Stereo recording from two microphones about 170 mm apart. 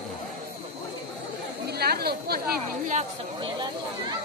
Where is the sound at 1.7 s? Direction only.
70° right (ahead or behind).